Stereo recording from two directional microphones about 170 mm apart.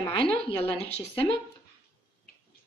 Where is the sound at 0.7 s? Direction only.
35° left (ahead or behind).